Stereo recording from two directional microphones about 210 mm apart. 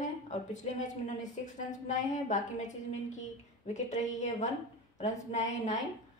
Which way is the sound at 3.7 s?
35° left (ahead or behind).